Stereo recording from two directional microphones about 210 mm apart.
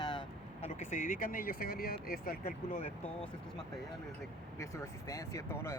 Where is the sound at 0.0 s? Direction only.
20° left (ahead or behind); by 2.8 s 45° left (ahead or behind).